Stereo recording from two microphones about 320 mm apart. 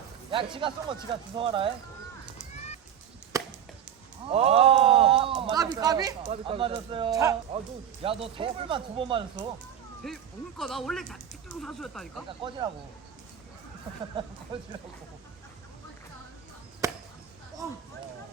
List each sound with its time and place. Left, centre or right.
0.3 s speech: centre
3.3 s chop: centre
4.3 s speech: centre
10.0 s speech: centre
12.4 s speech: centre
14.5 s speech: centre
16.8 s chop: centre